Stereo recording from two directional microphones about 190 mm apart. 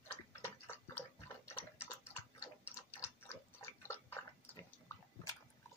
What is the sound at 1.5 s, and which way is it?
Tick-tock, 10° left (ahead or behind).